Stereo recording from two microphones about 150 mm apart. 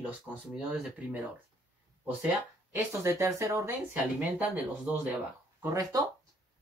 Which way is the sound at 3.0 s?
20° right (ahead or behind).